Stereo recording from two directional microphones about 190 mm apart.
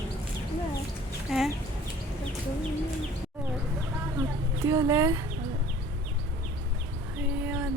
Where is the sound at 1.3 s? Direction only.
Centre (ahead or behind).